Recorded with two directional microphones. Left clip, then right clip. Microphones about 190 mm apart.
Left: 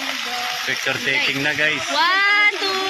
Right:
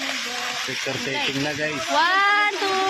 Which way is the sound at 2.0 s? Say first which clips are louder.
Left 2 dB; 40° right (ahead or behind).